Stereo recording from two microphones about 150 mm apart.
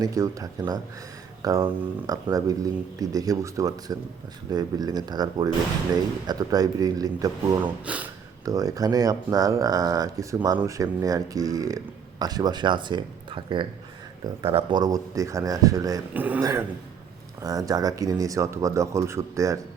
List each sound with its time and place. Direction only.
0.0 s speech: 20° right (ahead or behind)
16.1 s speech: 10° right (ahead or behind)
16.4 s speech: 25° right (ahead or behind)